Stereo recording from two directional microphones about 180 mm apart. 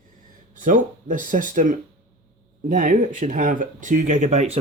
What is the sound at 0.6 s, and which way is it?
Speech, 45° right (ahead or behind).